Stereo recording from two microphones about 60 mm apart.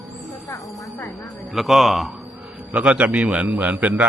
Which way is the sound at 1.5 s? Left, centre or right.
Centre.